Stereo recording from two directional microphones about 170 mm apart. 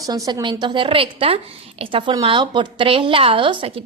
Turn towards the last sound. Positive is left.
turn(degrees=-30)  # may be behind; listen again after turning